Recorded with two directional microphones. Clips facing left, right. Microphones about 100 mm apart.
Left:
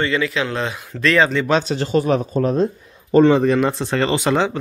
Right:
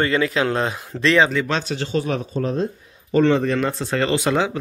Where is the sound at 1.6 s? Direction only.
30° left (ahead or behind).